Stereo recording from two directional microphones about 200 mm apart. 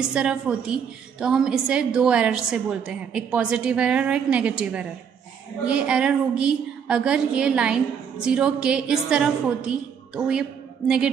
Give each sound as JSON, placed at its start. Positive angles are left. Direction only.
{"t": 0.1, "sound": "a woman's voice", "side_deg": -5}